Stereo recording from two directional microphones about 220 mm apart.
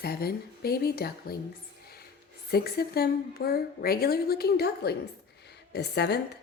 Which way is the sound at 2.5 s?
45° left (ahead or behind).